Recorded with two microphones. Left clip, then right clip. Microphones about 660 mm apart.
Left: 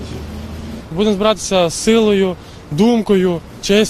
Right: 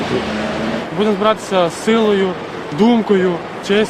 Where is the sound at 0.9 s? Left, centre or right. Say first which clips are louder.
Left 1 dB; left.